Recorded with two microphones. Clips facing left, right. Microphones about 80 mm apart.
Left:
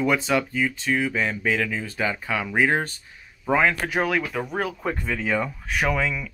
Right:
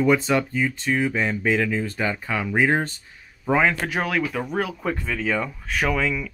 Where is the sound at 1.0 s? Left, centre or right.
Centre.